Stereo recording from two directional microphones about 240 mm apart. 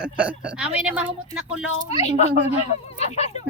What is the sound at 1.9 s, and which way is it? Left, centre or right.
A child's voice, left.